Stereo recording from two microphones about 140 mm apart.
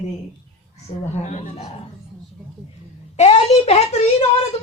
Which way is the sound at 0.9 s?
35° left (ahead or behind).